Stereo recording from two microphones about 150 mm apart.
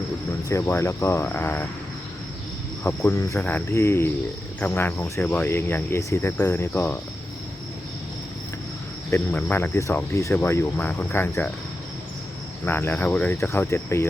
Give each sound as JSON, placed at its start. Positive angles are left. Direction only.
{"t": 0.4, "sound": "cricket", "side_deg": 20}
{"t": 2.8, "sound": "speech", "side_deg": 20}
{"t": 3.4, "sound": "cricket", "side_deg": 15}
{"t": 9.0, "sound": "cricket", "side_deg": 15}
{"t": 12.6, "sound": "cricket", "side_deg": 15}